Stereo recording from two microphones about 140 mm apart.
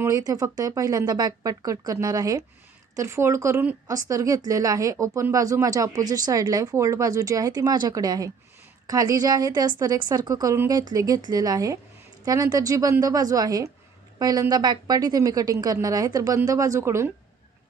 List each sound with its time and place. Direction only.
0.0 s speech: 25° right (ahead or behind)